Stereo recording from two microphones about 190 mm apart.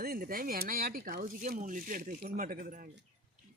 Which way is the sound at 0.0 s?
50° right (ahead or behind).